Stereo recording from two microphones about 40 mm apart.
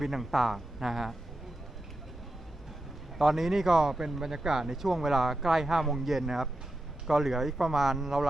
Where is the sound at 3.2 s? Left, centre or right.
Centre.